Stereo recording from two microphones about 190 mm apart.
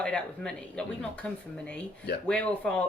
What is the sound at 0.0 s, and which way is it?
A woman's voice, 5° left (ahead or behind).